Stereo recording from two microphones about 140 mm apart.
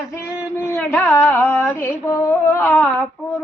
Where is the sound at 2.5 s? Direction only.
15° left (ahead or behind).